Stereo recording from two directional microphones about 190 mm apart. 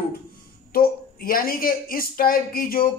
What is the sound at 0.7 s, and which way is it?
Speech, 50° left (ahead or behind).